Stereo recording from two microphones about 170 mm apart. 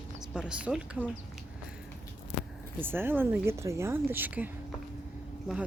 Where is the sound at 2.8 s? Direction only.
15° right (ahead or behind).